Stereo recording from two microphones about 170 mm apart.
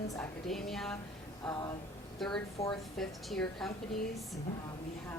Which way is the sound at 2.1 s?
5° left (ahead or behind).